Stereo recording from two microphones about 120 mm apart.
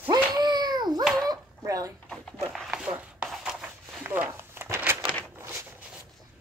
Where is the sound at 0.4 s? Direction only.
35° right (ahead or behind).